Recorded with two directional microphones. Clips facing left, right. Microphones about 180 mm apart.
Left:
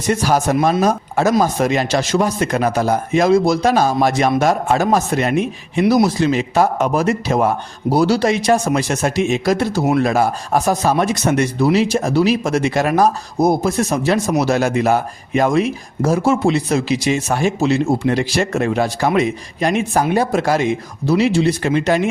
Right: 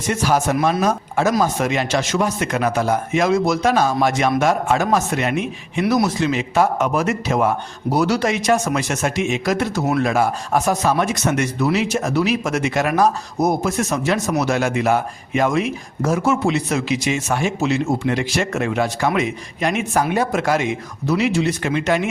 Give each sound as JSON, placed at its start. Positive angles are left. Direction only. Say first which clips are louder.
{"t": 0.1, "sound": "a man's voice", "louder": "left 3 dB", "side_deg": 35}